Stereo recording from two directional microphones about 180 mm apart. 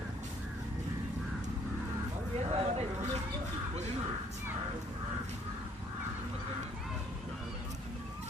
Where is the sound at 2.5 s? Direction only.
35° right (ahead or behind).